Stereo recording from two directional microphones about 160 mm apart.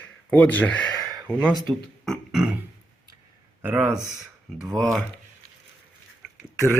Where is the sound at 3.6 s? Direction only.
5° right (ahead or behind).